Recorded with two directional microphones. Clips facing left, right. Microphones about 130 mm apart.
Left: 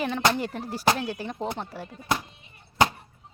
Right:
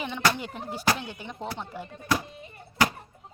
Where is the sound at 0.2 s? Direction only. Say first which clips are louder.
Left 1 dB; 25° left (ahead or behind).